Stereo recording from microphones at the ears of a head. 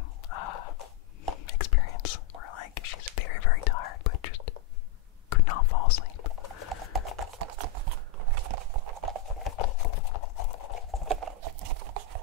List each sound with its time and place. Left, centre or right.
0.3 s a sound: left
1.3 s whispering: left
7.0 s horse: right
9.4 s clip-clop: left
11.1 s clip-clop: right